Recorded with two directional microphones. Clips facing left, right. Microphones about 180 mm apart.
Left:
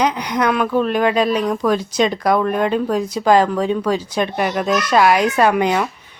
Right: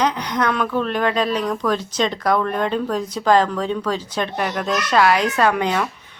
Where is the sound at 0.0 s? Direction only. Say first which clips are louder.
Left 2 dB; 10° left (ahead or behind).